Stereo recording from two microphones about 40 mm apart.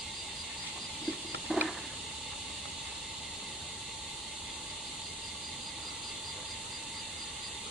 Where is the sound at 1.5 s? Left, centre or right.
Centre.